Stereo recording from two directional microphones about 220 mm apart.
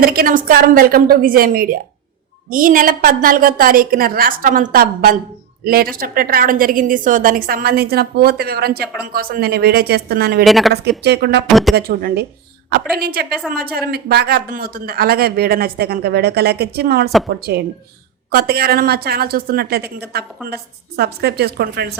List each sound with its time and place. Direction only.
0.0 s a woman's voice: 40° right (ahead or behind)
10.4 s speech: centre (ahead or behind)
11.0 s speech: 50° right (ahead or behind)
11.4 s speech: centre (ahead or behind)
11.7 s speech: 45° right (ahead or behind)